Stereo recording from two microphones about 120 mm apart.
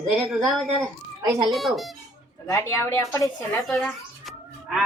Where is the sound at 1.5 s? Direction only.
Centre (ahead or behind).